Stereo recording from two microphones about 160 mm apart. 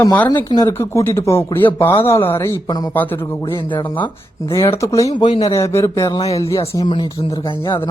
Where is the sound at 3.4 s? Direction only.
25° left (ahead or behind).